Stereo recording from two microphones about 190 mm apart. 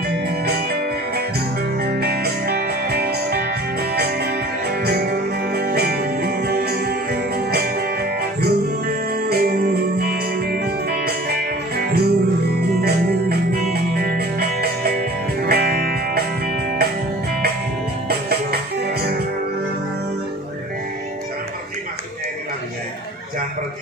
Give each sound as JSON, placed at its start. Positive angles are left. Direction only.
{"t": 1.8, "sound": "music", "side_deg": -55}
{"t": 18.0, "sound": "music", "side_deg": -55}